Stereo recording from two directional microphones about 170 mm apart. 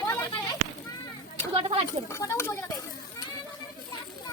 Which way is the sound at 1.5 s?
35° right (ahead or behind).